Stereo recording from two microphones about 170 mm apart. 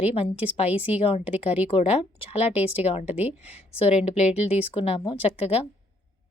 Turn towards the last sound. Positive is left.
turn(degrees=35)  # may be behind; listen again after turning